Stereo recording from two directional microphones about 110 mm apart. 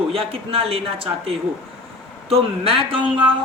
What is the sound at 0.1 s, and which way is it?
A woman's voice, 60° right (ahead or behind).